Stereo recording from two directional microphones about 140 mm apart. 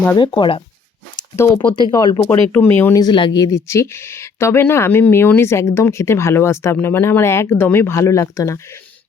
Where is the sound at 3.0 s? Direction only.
35° left (ahead or behind).